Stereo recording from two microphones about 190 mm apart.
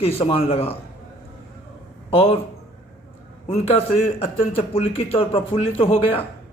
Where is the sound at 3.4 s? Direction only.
30° left (ahead or behind).